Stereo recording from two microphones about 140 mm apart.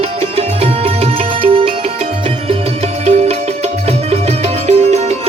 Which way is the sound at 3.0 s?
50° right (ahead or behind).